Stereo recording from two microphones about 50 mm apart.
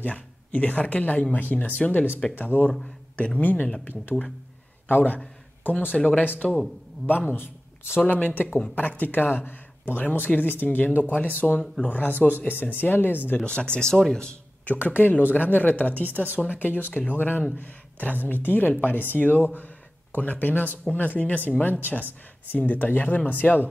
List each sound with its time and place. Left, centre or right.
0.0 s a man's voice: left
5.9 s a man's voice: left
8.1 s speech: left
13.5 s speech: left
13.9 s speech: centre
14.7 s speech: left
17.2 s speech: left